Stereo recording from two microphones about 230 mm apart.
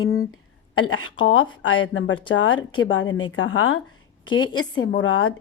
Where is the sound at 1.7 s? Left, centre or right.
Left.